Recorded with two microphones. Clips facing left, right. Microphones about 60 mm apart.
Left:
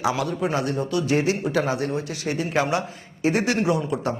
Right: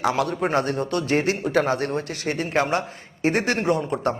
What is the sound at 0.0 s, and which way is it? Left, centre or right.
A man's voice, right.